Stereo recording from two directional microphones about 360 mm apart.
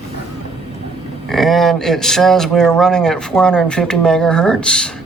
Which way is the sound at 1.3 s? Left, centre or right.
Centre.